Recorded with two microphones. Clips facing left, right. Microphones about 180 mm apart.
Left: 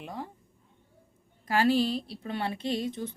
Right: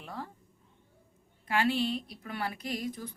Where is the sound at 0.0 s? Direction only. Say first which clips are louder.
Left 3 dB; 20° left (ahead or behind).